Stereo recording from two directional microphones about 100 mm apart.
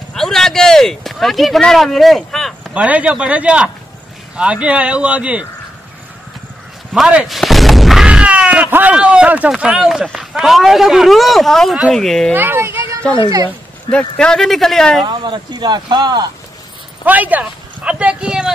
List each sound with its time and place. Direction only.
0.1 s a sound: 5° left (ahead or behind)
2.7 s speech: 15° right (ahead or behind)
7.2 s a sound: centre (ahead or behind)
9.5 s speech: 5° right (ahead or behind)
12.4 s speech: 20° right (ahead or behind)
13.8 s speech: 10° left (ahead or behind)
15.0 s speech: 50° right (ahead or behind)
17.0 s speech: 15° right (ahead or behind)